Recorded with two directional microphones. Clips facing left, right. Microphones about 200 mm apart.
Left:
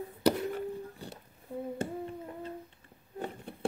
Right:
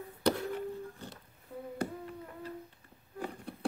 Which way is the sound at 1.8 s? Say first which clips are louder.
Left 2 dB; 25° left (ahead or behind).